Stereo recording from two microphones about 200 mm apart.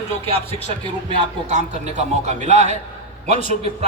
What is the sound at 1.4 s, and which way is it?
A man's voice, 35° right (ahead or behind).